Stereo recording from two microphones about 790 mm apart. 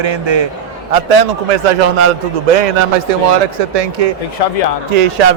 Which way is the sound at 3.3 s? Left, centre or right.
Right.